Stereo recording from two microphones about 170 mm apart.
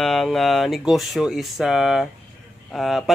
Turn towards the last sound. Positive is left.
turn(degrees=0)  # may be behind; listen again after turning